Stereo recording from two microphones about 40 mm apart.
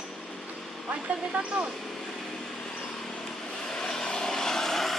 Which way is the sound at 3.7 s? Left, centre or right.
Centre.